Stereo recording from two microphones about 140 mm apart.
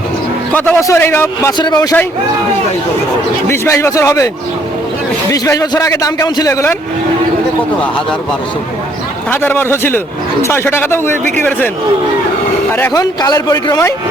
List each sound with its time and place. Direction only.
0.5 s a man's voice: 15° left (ahead or behind)
1.5 s a man's voice: 30° left (ahead or behind)
3.5 s a man's voice: 20° left (ahead or behind)
5.3 s a man's voice: 25° left (ahead or behind)
9.3 s a man's voice: 15° left (ahead or behind)
12.7 s a man's voice: 20° left (ahead or behind)